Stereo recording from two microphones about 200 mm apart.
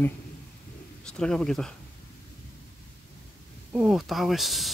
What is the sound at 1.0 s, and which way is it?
Speech, 5° left (ahead or behind).